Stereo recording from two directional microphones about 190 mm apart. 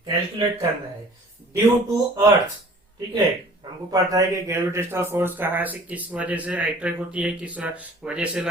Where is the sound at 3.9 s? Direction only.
15° right (ahead or behind).